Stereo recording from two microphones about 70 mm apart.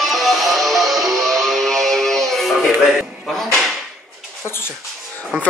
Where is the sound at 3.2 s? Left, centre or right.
Centre.